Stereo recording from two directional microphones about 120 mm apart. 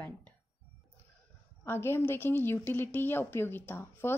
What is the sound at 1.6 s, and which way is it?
Speech, 20° left (ahead or behind).